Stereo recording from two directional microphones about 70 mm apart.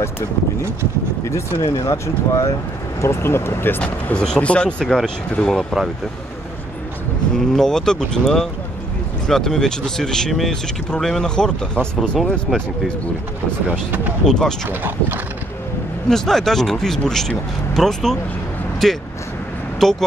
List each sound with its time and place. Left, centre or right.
1.2 s speech: left
3.0 s speech: left
3.8 s speech: centre
7.3 s speech: centre
13.7 s speech: right
14.2 s speech: centre
14.7 s speech: right
16.1 s speech: centre